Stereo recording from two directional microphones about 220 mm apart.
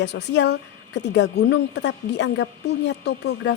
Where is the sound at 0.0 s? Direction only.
50° left (ahead or behind).